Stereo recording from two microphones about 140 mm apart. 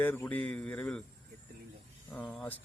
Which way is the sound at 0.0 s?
15° left (ahead or behind).